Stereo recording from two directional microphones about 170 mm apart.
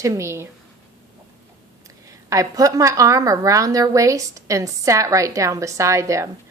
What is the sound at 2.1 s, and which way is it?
A woman's voice, 20° right (ahead or behind).